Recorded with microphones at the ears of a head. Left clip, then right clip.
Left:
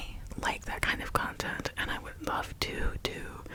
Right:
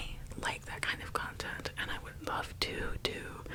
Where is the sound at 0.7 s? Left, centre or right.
Left.